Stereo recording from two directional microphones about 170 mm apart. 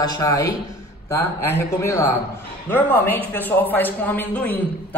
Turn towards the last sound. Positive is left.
turn(degrees=10)  # may be behind; listen again after turning